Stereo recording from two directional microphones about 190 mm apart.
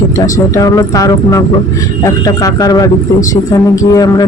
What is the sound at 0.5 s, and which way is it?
Speech, 20° left (ahead or behind).